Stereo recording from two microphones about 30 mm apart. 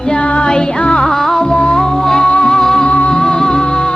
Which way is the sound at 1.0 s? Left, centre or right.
Centre.